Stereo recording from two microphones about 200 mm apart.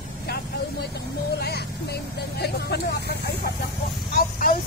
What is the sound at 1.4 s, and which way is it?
Vehicle, 55° left (ahead or behind).